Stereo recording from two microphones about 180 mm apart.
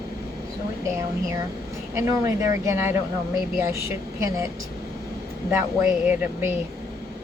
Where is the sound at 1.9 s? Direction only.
15° right (ahead or behind).